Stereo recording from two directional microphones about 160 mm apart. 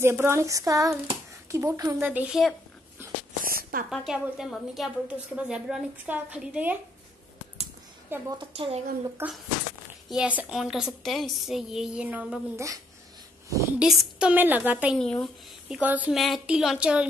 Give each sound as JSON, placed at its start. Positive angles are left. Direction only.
{"t": 0.0, "sound": "a woman's voice", "side_deg": -15}
{"t": 3.0, "sound": "a sound", "side_deg": -15}
{"t": 3.4, "sound": "a woman's voice", "side_deg": -65}
{"t": 3.9, "sound": "a woman's voice", "side_deg": 0}
{"t": 8.1, "sound": "a woman's voice", "side_deg": -15}
{"t": 8.5, "sound": "speech", "side_deg": -35}
{"t": 9.2, "sound": "a woman's voice", "side_deg": -15}
{"t": 13.7, "sound": "a woman's voice", "side_deg": -5}
{"t": 15.0, "sound": "a woman's voice", "side_deg": 5}
{"t": 15.7, "sound": "a woman's voice", "side_deg": -10}